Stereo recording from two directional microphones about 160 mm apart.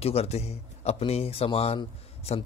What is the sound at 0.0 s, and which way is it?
Speech, 40° left (ahead or behind).